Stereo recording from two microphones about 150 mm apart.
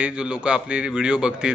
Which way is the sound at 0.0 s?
5° right (ahead or behind).